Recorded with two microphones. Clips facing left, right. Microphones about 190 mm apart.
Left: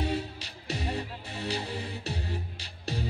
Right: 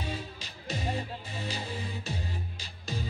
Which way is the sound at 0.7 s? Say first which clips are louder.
Even; 70° left (ahead or behind).